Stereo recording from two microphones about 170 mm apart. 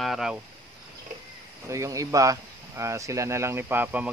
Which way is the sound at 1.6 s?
20° right (ahead or behind).